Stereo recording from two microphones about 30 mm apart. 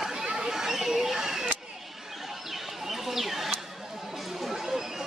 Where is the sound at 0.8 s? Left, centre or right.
Centre.